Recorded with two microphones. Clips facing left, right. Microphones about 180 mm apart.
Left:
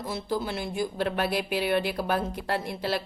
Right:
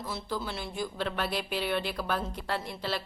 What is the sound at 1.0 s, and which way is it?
Speech, 50° left (ahead or behind).